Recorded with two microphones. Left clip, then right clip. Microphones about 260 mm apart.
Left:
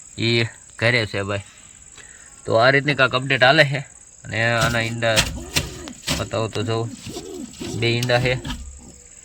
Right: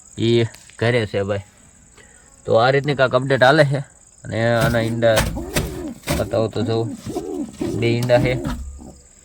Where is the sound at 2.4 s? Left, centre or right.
Centre.